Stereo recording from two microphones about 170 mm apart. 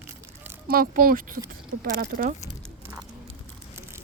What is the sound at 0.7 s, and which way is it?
Speech, 60° right (ahead or behind).